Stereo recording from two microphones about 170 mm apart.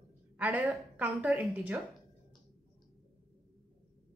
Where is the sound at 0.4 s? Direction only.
5° right (ahead or behind).